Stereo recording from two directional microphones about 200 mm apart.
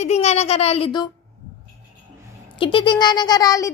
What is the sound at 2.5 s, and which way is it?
Speech, 25° left (ahead or behind).